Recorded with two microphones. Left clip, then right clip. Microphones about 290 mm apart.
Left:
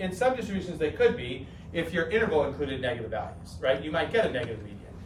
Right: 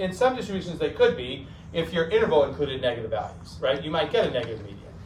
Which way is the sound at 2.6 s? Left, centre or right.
Right.